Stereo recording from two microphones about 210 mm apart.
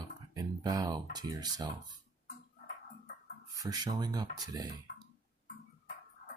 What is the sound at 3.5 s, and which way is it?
Speech, 15° right (ahead or behind).